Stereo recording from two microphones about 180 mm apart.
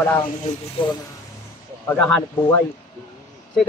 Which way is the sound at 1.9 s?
10° left (ahead or behind).